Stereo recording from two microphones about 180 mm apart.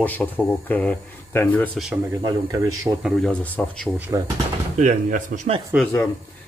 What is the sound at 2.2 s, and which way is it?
Speech, 20° right (ahead or behind).